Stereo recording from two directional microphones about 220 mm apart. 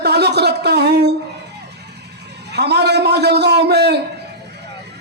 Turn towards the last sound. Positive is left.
turn(degrees=-50)  # may be behind; listen again after turning